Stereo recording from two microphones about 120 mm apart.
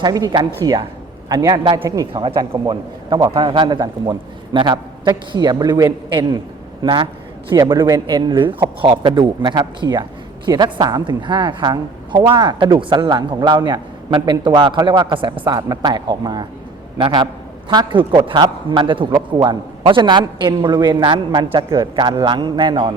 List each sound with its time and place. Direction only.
0.0 s a man's voice: 35° right (ahead or behind)
15.5 s a man's voice: 35° right (ahead or behind)